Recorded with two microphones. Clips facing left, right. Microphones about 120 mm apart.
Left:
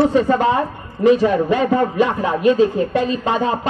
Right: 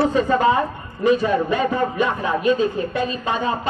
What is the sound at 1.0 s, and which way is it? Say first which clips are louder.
A man's voice: left 4 dB; 90° left.